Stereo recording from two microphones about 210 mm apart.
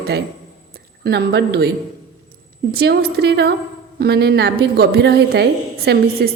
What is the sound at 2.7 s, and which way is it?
A woman's voice, 50° right (ahead or behind).